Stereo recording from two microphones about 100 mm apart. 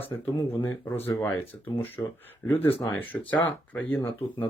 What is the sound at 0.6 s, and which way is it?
Speech, 30° left (ahead or behind).